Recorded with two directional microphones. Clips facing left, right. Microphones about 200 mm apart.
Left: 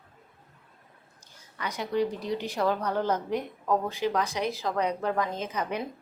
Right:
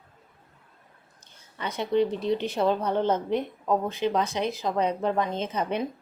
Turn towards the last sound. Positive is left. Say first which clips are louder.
# right 3 dB
turn(degrees=-25)  # may be behind; listen again after turning